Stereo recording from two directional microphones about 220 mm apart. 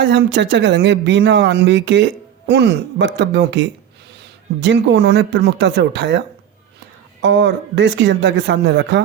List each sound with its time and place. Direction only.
0.0 s speech: 55° right (ahead or behind)